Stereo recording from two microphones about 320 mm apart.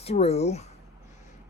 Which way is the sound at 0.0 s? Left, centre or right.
Centre.